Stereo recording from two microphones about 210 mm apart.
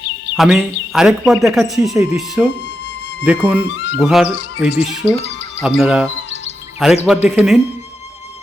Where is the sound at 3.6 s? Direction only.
55° left (ahead or behind).